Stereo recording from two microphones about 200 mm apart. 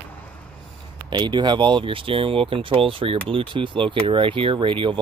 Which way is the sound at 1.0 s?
20° right (ahead or behind).